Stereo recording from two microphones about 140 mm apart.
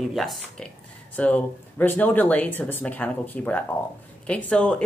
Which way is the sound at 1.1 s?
10° left (ahead or behind).